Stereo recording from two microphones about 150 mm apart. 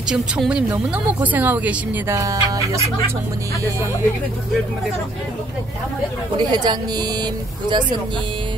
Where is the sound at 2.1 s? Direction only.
20° right (ahead or behind).